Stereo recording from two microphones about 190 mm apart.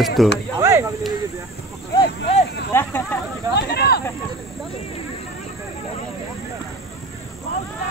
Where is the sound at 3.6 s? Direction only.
55° left (ahead or behind).